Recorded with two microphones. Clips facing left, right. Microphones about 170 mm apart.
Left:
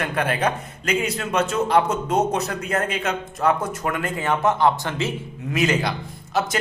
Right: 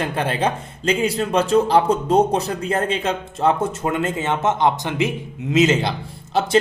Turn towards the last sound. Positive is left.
turn(degrees=-30)  # may be behind; listen again after turning